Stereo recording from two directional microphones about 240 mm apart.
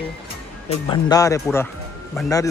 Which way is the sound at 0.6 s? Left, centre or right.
Centre.